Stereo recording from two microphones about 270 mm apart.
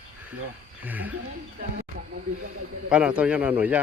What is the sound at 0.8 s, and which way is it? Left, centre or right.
Speech, centre.